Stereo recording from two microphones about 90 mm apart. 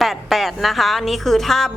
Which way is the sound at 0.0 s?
Centre (ahead or behind).